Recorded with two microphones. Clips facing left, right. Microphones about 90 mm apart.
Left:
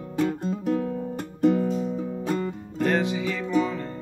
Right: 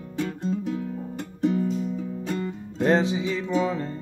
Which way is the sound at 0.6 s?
50° left (ahead or behind).